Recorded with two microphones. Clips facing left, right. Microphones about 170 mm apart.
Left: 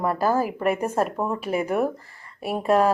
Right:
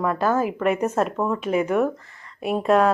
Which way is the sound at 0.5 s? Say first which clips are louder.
Right 2 dB; 35° left (ahead or behind).